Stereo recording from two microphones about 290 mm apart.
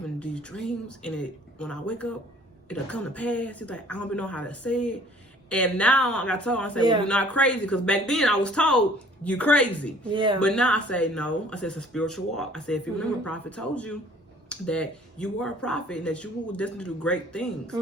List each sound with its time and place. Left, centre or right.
0.2 s speech: centre
10.1 s speech: centre
10.4 s speech: centre